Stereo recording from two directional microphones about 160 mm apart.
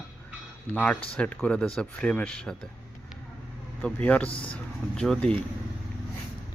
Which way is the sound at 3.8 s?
10° left (ahead or behind).